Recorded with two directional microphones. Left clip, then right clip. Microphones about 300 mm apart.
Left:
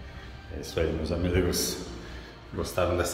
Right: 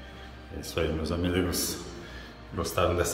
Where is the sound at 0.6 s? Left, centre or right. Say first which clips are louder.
Left 1 dB; centre.